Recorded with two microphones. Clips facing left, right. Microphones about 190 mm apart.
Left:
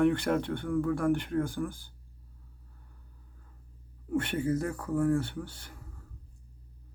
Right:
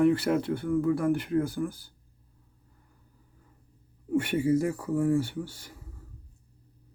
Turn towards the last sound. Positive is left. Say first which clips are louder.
# right 3 dB
turn(degrees=-10)  # may be behind; listen again after turning